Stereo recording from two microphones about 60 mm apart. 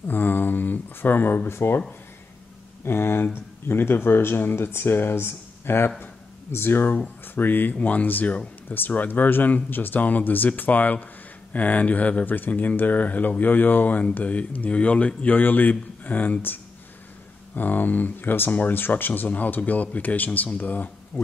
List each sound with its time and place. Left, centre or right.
0.1 s speech: left
2.8 s speech: left
17.6 s speech: left